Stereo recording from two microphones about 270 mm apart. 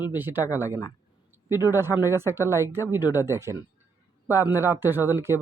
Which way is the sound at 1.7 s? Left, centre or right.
Centre.